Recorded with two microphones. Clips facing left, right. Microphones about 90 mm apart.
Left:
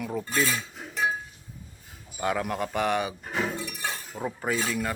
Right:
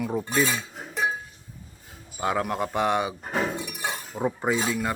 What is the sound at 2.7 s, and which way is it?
Shatter, 15° right (ahead or behind).